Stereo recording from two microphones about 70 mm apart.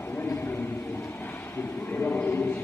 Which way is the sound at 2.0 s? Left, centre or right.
Left.